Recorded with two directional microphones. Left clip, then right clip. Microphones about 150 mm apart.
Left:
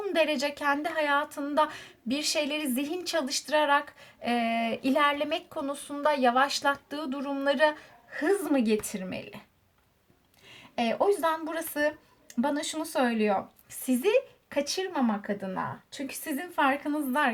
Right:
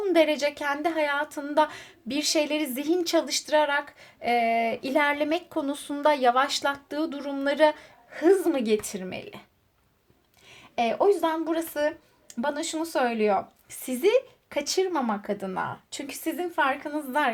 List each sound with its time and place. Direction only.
0.0 s a woman's voice: 30° right (ahead or behind)
10.8 s a woman's voice: 20° right (ahead or behind)